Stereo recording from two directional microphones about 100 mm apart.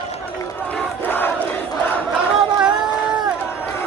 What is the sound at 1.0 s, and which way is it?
Crowd, 20° left (ahead or behind).